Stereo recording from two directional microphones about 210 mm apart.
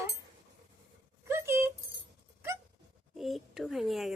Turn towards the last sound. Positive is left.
turn(degrees=0)  # may be behind; listen again after turning